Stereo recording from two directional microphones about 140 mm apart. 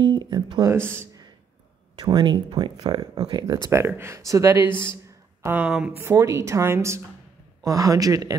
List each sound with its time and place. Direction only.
0.0 s speech: 30° right (ahead or behind)
0.9 s a sound: 25° right (ahead or behind)
2.0 s speech: 30° right (ahead or behind)
3.7 s a woman's voice: 15° right (ahead or behind)
6.0 s a woman's voice: 20° right (ahead or behind)